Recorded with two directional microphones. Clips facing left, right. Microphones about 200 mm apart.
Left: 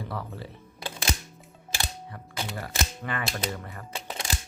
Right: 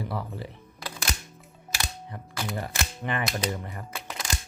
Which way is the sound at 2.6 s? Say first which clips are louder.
Even; 20° right (ahead or behind).